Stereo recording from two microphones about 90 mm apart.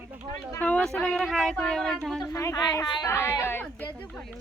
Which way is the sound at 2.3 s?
40° left (ahead or behind).